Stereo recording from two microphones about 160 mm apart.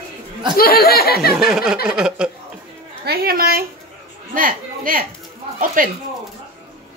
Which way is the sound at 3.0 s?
70° right (ahead or behind).